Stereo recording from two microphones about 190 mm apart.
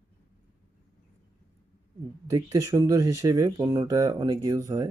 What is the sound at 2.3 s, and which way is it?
Speech, 20° right (ahead or behind).